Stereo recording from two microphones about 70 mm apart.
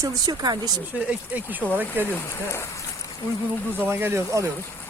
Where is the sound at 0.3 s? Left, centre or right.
Right.